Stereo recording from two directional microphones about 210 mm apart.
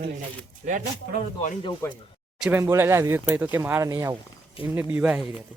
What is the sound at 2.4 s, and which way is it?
Speech, 10° right (ahead or behind).